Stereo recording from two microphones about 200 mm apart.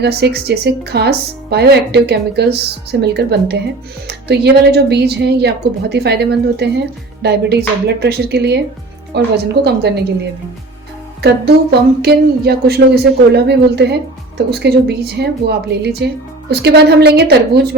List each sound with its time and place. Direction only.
0.0 s speech: 55° right (ahead or behind)
11.2 s speech: 55° right (ahead or behind)